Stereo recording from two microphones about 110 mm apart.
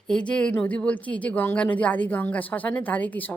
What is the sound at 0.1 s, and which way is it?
A woman's voice, 10° left (ahead or behind).